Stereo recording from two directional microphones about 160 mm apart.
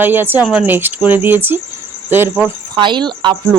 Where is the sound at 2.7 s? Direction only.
30° right (ahead or behind).